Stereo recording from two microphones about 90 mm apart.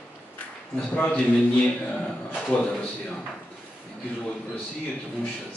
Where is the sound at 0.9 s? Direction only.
15° left (ahead or behind).